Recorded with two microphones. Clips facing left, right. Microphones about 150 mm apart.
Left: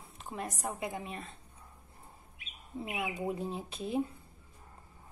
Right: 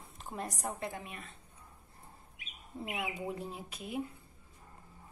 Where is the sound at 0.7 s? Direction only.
15° left (ahead or behind).